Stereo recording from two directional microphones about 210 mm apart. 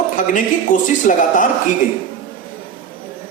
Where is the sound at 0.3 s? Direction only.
40° left (ahead or behind).